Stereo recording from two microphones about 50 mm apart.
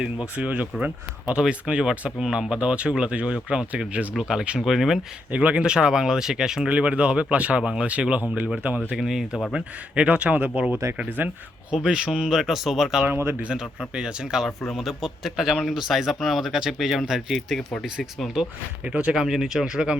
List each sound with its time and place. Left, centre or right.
0.0 s speech: right
4.2 s speech: centre
4.6 s a man's voice: centre
5.3 s speech: right; by 6.7 s centre
6.7 s speech: right
9.0 s speech: centre
9.5 s speech: centre
10.8 s speech: right
11.7 s speech: centre
13.1 s speech: right
13.4 s speech: centre
14.8 s a man's voice: centre
17.8 s speech: centre